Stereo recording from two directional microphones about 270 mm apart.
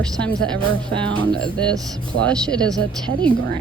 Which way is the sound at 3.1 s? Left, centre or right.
Right.